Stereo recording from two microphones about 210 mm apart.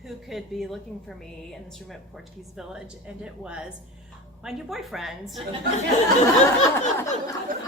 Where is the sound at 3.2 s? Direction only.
5° right (ahead or behind).